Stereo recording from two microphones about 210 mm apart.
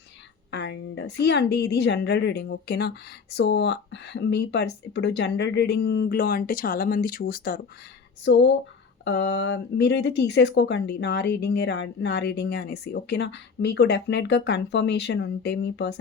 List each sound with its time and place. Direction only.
0.5 s a woman's voice: 55° left (ahead or behind)
8.2 s speech: 55° left (ahead or behind)